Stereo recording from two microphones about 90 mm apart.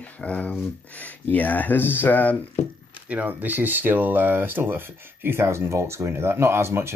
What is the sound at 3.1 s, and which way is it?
Speech, 20° right (ahead or behind).